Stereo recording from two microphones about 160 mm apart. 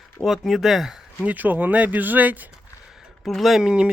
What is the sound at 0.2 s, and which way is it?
Speech, centre (ahead or behind).